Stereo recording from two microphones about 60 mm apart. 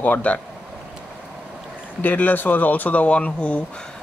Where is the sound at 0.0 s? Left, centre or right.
Left.